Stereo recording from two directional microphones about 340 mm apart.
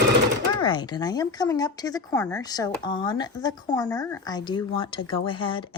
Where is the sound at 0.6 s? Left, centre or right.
Centre.